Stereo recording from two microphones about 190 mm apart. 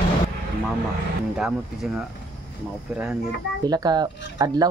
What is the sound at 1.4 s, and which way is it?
Speech, 5° right (ahead or behind).